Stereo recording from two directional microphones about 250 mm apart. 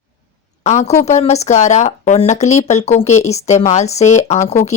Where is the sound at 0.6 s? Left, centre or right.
Left.